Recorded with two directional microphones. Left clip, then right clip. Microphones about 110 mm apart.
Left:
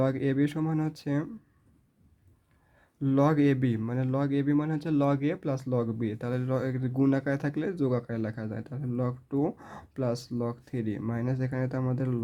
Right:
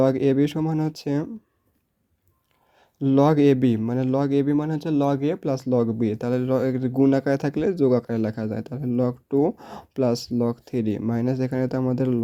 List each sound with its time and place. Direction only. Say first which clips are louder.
0.0 s speech: right 8 dB; 50° right (ahead or behind)
3.0 s speech: right 7 dB; 40° right (ahead or behind)